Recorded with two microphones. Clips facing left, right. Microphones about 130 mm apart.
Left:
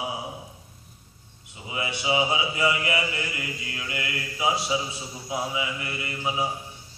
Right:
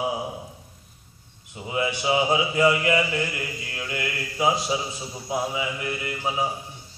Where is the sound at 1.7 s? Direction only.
40° right (ahead or behind).